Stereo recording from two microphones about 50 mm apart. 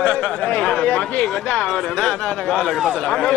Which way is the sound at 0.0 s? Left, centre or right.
Left.